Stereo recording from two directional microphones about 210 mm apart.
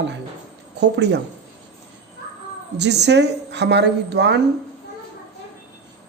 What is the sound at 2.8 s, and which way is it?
Speech, 55° right (ahead or behind).